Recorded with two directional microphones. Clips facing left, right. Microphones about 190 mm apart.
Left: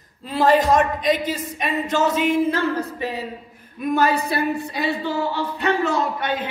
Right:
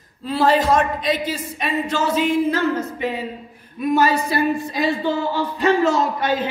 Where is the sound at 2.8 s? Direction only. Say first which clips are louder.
Right 2 dB; 35° left (ahead or behind).